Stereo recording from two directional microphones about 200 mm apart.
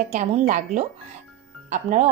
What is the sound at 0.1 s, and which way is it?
A woman's voice, 35° right (ahead or behind).